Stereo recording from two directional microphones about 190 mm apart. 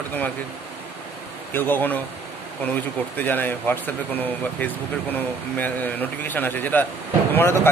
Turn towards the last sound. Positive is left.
turn(degrees=10)  # may be behind; listen again after turning